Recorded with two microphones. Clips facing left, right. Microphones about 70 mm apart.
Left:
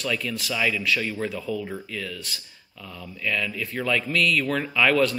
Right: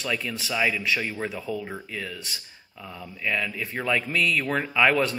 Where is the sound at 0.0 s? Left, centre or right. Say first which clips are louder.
Left 1 dB; centre.